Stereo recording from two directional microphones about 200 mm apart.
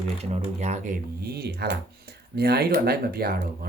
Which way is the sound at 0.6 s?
35° right (ahead or behind).